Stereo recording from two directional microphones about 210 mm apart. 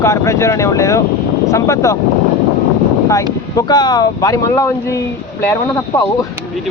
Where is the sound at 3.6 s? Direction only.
20° left (ahead or behind).